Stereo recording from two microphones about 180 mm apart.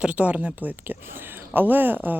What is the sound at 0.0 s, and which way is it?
Speech, 5° right (ahead or behind).